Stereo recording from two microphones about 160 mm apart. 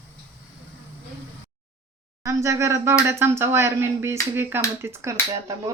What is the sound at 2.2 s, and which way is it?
Speech, 15° right (ahead or behind).